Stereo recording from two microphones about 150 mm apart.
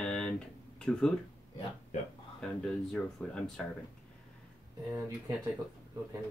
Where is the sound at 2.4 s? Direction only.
5° left (ahead or behind).